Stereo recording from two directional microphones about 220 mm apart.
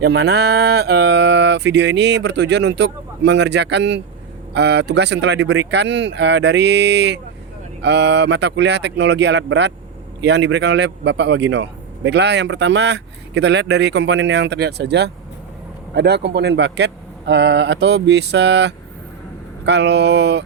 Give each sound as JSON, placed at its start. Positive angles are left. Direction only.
{"t": 0.0, "sound": "a man's voice", "side_deg": -50}